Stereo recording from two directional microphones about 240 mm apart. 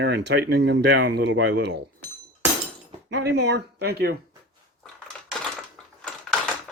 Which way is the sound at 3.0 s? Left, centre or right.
Right.